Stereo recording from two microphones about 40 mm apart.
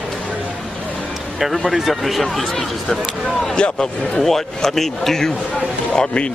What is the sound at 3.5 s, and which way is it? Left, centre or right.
Speech, left.